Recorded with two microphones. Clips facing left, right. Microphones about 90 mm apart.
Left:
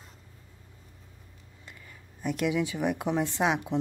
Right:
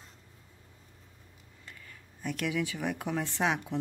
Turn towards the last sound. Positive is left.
turn(degrees=15)  # may be behind; listen again after turning